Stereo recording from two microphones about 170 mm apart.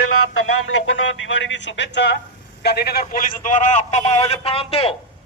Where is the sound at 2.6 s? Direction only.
70° left (ahead or behind).